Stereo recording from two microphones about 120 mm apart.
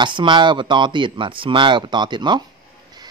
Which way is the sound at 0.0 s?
40° right (ahead or behind).